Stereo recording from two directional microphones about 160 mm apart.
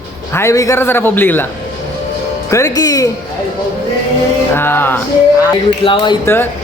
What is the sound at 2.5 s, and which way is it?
Speech, 20° left (ahead or behind).